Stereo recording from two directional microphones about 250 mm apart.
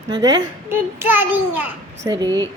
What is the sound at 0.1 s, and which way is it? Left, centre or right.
A child's voice, centre.